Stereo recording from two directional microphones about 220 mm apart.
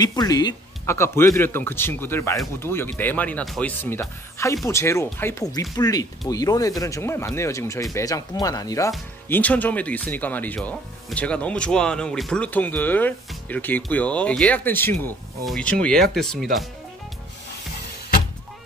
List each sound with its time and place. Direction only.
0.0 s speech: 15° left (ahead or behind); by 16.4 s centre (ahead or behind)